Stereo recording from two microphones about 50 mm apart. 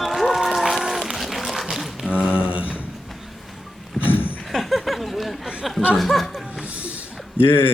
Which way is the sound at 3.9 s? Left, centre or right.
Left.